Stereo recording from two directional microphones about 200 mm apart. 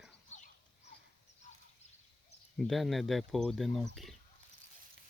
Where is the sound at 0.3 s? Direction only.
40° left (ahead or behind).